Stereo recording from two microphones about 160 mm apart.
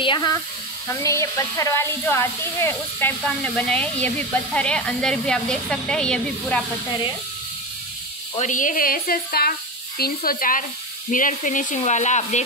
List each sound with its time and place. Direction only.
0.0 s speech: 30° left (ahead or behind); by 6.6 s 5° left (ahead or behind)
8.4 s speech: 50° left (ahead or behind)